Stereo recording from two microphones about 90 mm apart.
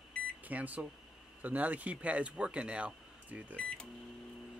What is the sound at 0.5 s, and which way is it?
Speech, 15° right (ahead or behind).